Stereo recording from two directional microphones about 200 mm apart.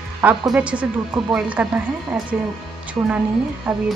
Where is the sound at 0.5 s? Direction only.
5° right (ahead or behind).